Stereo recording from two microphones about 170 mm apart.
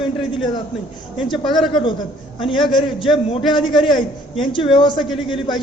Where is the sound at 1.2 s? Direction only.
25° left (ahead or behind).